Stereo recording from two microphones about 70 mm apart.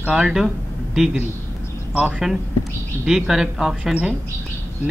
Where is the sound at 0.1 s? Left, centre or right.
Centre.